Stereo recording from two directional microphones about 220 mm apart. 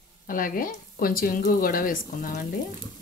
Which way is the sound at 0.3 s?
40° left (ahead or behind).